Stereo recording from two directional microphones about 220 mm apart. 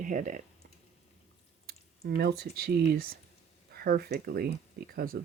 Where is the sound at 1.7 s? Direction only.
45° right (ahead or behind).